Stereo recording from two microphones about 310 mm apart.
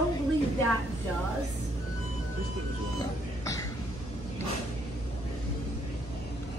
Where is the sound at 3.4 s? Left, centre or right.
Centre.